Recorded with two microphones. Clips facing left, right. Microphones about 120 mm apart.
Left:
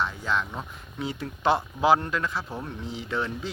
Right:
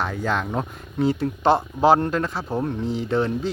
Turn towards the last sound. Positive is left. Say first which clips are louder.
# right 8 dB
turn(degrees=-35)  # may be behind; listen again after turning